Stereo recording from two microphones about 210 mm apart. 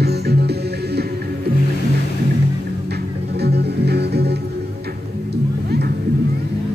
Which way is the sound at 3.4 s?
50° right (ahead or behind).